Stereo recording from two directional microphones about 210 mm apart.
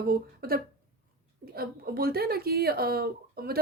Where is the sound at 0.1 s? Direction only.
45° right (ahead or behind).